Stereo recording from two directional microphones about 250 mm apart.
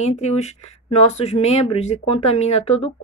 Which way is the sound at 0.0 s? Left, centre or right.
Left.